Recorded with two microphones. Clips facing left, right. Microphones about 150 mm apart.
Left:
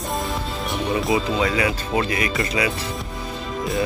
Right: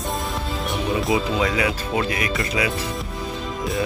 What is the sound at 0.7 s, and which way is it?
Speech, centre (ahead or behind).